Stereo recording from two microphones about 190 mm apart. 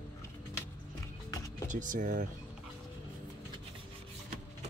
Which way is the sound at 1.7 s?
45° right (ahead or behind).